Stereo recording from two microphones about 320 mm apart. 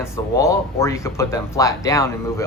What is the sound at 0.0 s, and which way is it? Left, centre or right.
Speech, centre.